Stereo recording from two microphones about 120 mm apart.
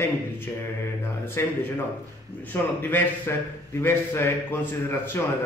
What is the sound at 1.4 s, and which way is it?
Mantra, 20° left (ahead or behind).